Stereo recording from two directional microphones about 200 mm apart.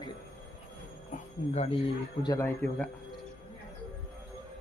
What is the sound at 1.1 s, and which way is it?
Speech, 30° left (ahead or behind).